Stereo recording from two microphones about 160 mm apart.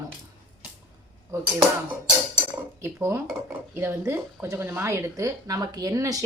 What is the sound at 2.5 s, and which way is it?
A woman's voice, 15° right (ahead or behind).